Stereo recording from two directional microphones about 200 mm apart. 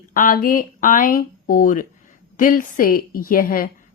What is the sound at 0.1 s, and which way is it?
A woman's voice, 45° left (ahead or behind).